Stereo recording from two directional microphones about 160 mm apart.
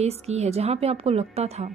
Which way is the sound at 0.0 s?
45° right (ahead or behind).